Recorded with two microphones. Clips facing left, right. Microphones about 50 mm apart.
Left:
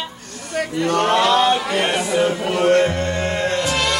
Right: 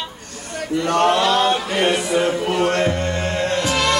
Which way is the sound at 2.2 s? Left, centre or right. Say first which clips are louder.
Even; centre.